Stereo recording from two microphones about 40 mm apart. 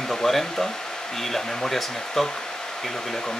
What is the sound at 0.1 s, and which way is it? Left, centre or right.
Speech, centre.